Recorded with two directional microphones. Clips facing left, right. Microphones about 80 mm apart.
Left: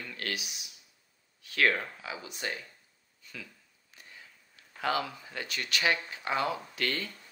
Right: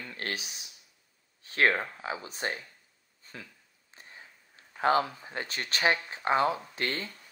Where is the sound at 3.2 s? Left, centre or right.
Right.